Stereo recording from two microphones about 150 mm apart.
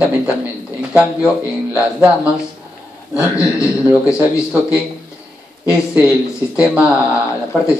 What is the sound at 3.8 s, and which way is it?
Speech, 5° right (ahead or behind).